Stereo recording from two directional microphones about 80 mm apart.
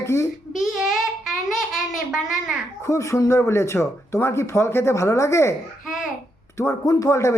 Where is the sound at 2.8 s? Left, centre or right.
Left.